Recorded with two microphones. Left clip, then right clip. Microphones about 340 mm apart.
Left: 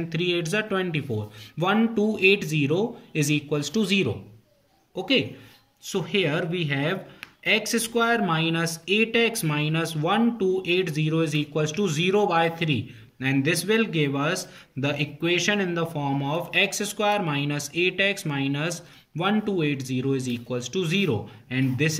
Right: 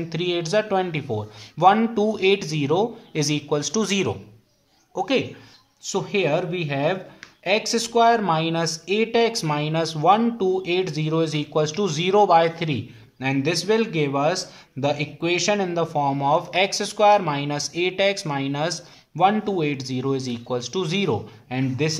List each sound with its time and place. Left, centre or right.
0.1 s speech: centre
5.9 s speech: centre